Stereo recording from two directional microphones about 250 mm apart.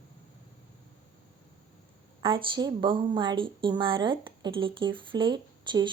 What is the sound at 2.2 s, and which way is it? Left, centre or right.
Speech, centre.